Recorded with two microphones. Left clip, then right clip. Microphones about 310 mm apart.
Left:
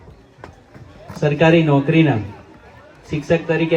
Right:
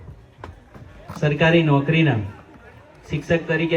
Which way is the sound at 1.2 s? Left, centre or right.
Left.